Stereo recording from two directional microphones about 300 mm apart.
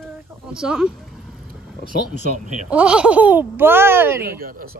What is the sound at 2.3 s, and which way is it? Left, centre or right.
Speech, right.